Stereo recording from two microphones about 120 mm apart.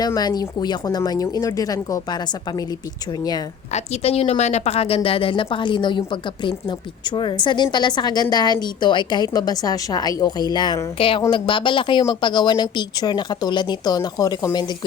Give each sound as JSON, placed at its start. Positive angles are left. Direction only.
{"t": 0.0, "sound": "a woman's voice", "side_deg": 35}
{"t": 3.7, "sound": "a woman's voice", "side_deg": 65}
{"t": 10.9, "sound": "a woman's voice", "side_deg": 50}